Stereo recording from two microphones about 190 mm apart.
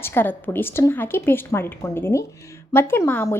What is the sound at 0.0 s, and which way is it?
A woman's voice, 10° left (ahead or behind).